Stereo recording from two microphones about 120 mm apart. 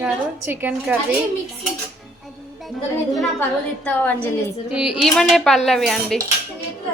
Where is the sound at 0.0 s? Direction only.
15° right (ahead or behind).